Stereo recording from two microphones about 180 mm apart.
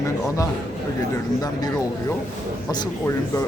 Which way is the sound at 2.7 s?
20° left (ahead or behind).